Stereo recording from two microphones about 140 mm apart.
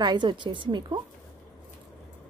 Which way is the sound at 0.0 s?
30° right (ahead or behind).